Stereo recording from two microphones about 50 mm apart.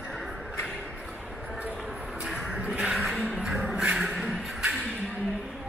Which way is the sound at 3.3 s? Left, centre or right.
Centre.